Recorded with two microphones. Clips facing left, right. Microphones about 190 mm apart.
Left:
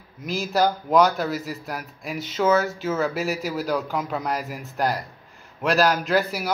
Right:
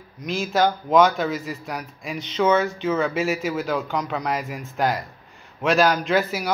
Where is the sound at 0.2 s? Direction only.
Centre (ahead or behind).